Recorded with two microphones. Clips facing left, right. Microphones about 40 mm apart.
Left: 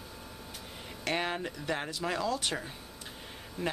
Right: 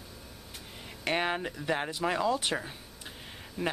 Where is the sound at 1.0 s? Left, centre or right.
Centre.